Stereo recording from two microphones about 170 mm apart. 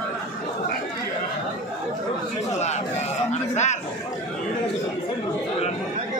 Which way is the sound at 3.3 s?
40° left (ahead or behind).